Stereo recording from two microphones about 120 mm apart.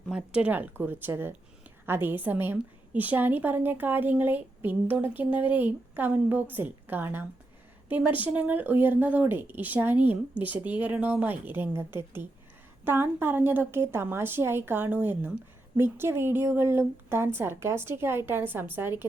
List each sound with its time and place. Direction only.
0.1 s a woman's voice: 10° right (ahead or behind)